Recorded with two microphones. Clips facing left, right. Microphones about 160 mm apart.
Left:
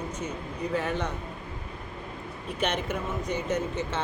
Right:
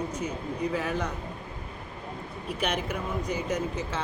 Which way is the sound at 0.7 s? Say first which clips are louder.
Left 4 dB; 5° right (ahead or behind).